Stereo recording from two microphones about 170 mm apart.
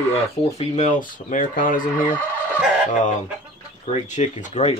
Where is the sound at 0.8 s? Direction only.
50° left (ahead or behind).